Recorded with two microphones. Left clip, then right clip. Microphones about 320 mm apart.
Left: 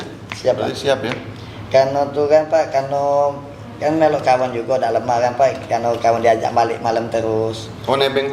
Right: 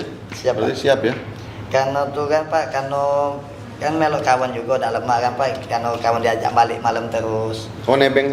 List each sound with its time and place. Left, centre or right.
0.7 s a man's voice: left
1.7 s a man's voice: right
7.9 s a man's voice: left